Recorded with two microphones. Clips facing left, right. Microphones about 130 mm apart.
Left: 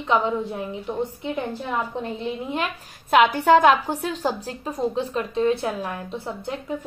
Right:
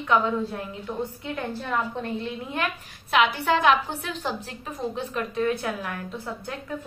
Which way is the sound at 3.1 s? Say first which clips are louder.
Left 6 dB; 45° left (ahead or behind).